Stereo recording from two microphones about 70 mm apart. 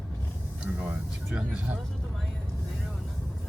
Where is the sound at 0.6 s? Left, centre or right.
Centre.